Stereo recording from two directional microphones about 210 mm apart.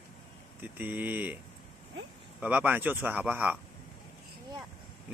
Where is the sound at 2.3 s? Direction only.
10° right (ahead or behind).